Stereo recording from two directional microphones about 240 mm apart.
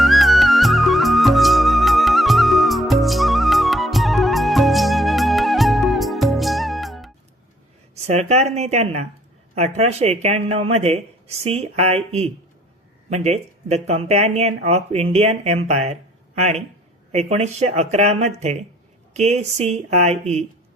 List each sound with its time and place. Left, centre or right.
0.0 s music: centre
8.0 s speech: right